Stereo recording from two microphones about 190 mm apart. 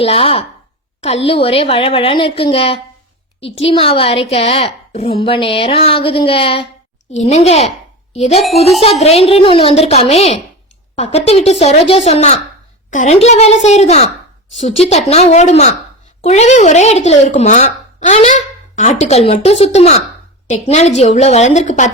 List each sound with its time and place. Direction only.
0.0 s a woman's voice: 30° left (ahead or behind)